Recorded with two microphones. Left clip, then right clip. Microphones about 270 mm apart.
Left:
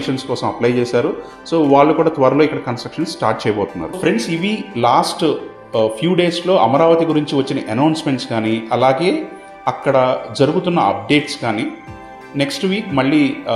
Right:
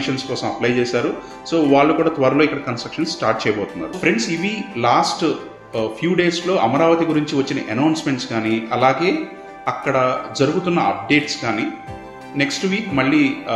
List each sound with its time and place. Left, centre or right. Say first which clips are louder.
0.0 s speech: left 3 dB; centre